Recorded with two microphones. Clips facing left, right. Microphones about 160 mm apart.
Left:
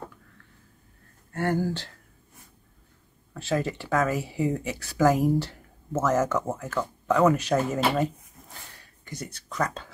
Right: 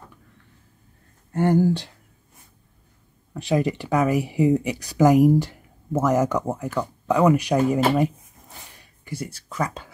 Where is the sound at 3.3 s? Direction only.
15° right (ahead or behind).